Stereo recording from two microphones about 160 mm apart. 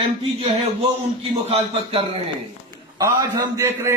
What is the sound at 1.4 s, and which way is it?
Speech, 35° right (ahead or behind).